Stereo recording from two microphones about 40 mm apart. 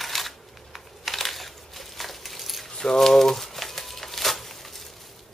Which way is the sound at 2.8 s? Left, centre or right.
Centre.